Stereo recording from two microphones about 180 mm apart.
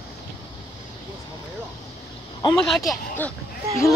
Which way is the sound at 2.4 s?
20° left (ahead or behind).